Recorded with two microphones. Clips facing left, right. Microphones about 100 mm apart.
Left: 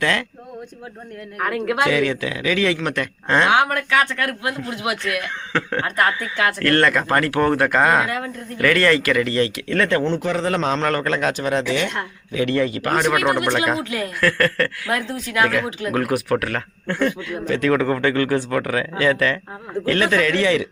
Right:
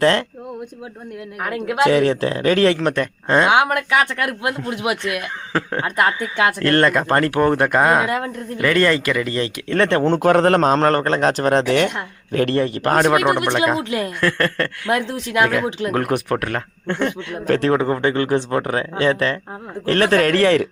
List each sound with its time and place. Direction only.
0.0 s a man's voice: 30° right (ahead or behind)
1.4 s speech: 10° right (ahead or behind)
1.8 s a man's voice: 35° right (ahead or behind)
2.9 s speech: 20° right (ahead or behind)
10.0 s a man's voice: 55° right (ahead or behind)
13.1 s a man's voice: 20° right (ahead or behind); by 20.7 s 40° right (ahead or behind)